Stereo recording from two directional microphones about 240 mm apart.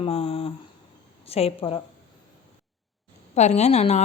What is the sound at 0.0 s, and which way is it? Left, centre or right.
Speech, left.